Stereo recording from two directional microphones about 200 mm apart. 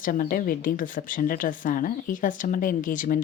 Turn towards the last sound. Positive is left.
turn(degrees=40)  # may be behind; listen again after turning